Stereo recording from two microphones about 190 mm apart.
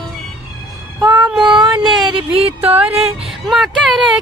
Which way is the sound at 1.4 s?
25° right (ahead or behind).